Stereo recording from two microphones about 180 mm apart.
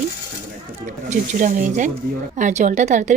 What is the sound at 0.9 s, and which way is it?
A woman's voice, 45° right (ahead or behind).